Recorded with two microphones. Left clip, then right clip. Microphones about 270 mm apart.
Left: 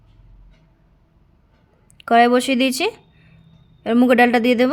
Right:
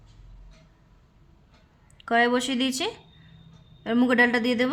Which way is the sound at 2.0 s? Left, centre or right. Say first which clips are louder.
Left 8 dB; centre.